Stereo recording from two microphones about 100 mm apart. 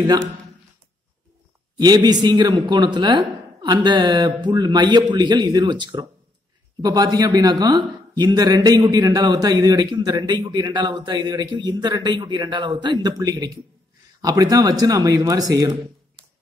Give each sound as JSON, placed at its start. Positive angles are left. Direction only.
{"t": 1.8, "sound": "a man's voice", "side_deg": -45}